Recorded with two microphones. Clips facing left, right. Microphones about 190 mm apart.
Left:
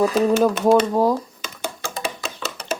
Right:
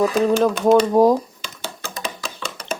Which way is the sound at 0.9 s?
15° right (ahead or behind).